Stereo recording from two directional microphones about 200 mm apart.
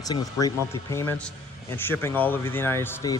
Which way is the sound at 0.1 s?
20° left (ahead or behind).